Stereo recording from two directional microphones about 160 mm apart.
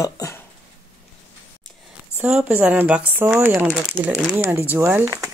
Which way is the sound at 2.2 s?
5° right (ahead or behind).